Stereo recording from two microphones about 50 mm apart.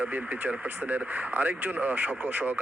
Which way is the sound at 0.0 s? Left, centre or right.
Right.